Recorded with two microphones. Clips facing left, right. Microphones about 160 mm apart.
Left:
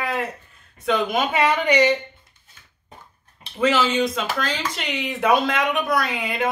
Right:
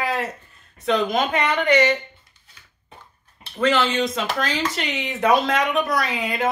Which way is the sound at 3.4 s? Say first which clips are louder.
Even; 5° left (ahead or behind).